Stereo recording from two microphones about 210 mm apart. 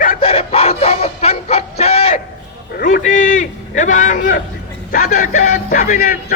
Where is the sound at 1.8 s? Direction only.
30° left (ahead or behind).